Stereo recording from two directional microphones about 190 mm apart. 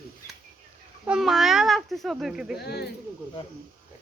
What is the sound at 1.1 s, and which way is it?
A child's voice, centre (ahead or behind).